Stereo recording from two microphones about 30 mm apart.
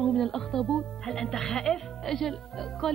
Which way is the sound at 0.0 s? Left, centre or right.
Centre.